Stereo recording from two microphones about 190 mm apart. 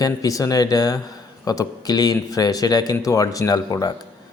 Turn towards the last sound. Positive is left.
turn(degrees=20)  # may be behind; listen again after turning